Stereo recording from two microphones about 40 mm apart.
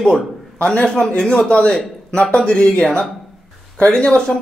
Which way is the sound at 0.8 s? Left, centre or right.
Centre.